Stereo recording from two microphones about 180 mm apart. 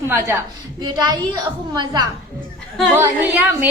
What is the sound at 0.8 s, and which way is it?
A woman's voice, 25° right (ahead or behind).